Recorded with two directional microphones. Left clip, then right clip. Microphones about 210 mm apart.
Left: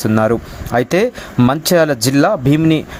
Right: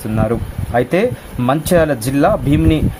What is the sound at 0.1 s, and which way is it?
Speech, 30° left (ahead or behind).